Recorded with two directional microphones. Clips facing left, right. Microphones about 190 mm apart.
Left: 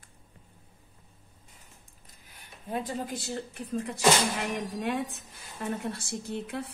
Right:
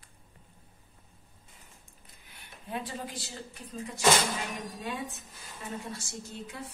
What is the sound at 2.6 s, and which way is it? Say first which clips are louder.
A woman's voice: left 4 dB; 45° left (ahead or behind).